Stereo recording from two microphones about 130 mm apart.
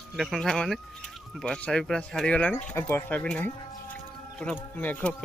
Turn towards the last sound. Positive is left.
turn(degrees=10)  # may be behind; listen again after turning